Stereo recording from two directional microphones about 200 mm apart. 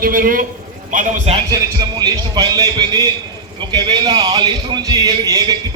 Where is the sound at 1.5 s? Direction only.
20° right (ahead or behind).